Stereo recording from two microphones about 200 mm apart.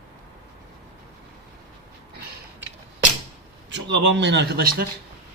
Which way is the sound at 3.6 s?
65° right (ahead or behind).